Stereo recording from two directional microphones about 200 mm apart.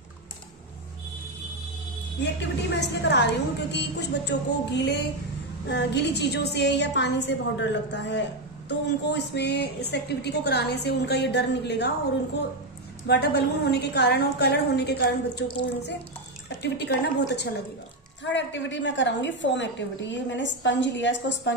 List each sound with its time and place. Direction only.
2.7 s a woman's voice: 60° left (ahead or behind)
13.0 s a woman's voice: 55° left (ahead or behind)